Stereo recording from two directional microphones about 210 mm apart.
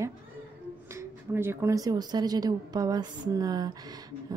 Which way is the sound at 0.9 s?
10° right (ahead or behind).